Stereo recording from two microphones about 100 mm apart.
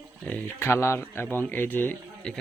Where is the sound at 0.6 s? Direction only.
25° left (ahead or behind).